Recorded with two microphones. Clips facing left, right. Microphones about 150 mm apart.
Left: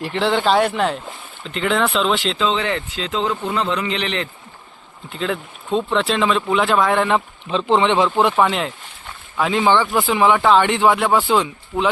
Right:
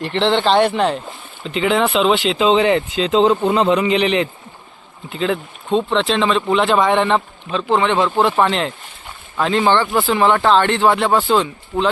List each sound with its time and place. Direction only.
0.0 s speech: 5° left (ahead or behind)
2.4 s speech: 15° right (ahead or behind)
5.0 s speech: centre (ahead or behind)
7.5 s speech: 20° left (ahead or behind)
8.4 s speech: 5° left (ahead or behind)